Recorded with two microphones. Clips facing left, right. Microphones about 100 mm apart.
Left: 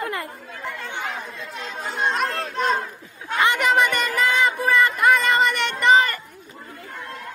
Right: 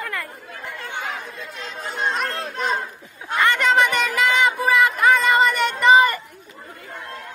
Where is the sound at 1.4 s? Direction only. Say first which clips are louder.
Left 1 dB; centre (ahead or behind).